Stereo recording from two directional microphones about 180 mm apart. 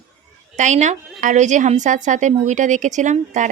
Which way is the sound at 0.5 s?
40° right (ahead or behind).